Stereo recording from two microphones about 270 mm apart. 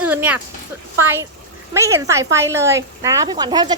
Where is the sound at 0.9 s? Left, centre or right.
Centre.